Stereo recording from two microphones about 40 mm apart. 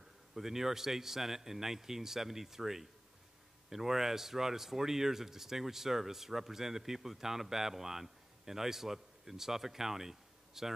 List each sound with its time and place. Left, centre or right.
0.3 s speech: centre